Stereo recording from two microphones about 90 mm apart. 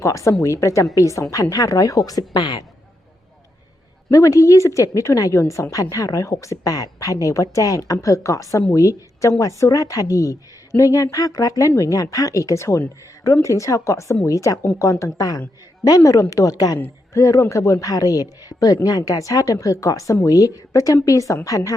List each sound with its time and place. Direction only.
0.0 s speech: 40° left (ahead or behind)
4.1 s a woman's voice: 40° left (ahead or behind)